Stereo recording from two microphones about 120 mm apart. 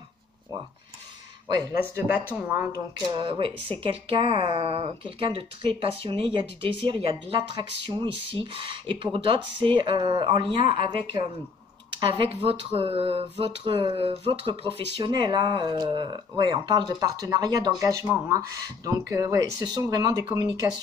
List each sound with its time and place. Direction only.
1.5 s speech: 30° right (ahead or behind)
2.3 s speech: 15° right (ahead or behind)
3.1 s speech: 45° right (ahead or behind)
17.8 s speech: 20° right (ahead or behind)